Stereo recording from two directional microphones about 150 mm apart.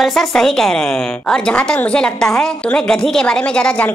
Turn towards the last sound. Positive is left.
turn(degrees=10)  # may be behind; listen again after turning